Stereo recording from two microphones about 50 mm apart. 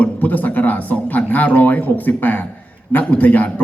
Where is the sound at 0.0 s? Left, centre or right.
Left.